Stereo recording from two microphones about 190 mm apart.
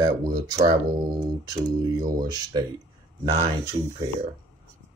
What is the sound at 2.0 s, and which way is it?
Speech, 20° right (ahead or behind).